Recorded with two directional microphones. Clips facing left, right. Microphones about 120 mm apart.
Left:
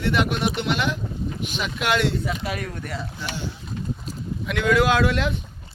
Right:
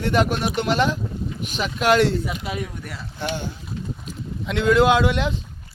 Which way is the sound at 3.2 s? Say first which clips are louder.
Right 8 dB; 55° right (ahead or behind).